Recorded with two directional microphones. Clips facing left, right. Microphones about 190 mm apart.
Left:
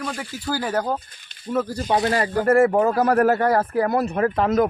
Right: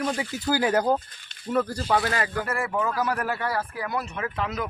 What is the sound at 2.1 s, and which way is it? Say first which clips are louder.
Speech: left 6 dB; 35° left (ahead or behind).